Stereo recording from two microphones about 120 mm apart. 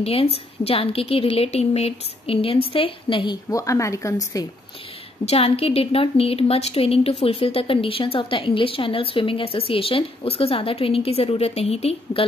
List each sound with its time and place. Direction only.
0.0 s a woman's voice: 55° left (ahead or behind)
3.4 s a woman's voice: 25° left (ahead or behind)
5.2 s a woman's voice: 55° left (ahead or behind)